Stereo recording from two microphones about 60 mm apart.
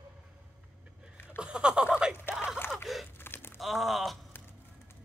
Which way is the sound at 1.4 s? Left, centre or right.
Centre.